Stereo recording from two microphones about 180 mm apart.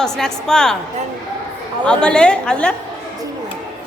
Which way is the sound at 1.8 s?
5° left (ahead or behind).